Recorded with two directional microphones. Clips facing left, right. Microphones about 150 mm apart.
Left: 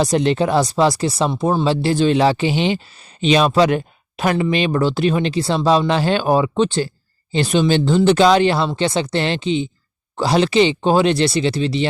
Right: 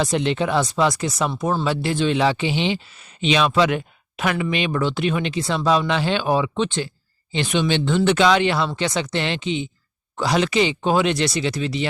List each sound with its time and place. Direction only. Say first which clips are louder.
0.0 s speech: left 4 dB; 40° left (ahead or behind)